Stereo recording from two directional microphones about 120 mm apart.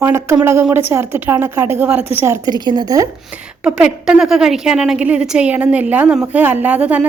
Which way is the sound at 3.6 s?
10° right (ahead or behind).